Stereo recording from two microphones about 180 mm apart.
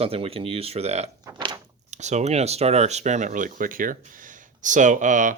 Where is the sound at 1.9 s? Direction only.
40° right (ahead or behind).